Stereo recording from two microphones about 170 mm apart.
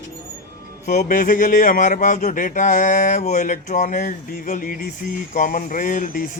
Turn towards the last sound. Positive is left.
turn(degrees=50)  # may be behind; listen again after turning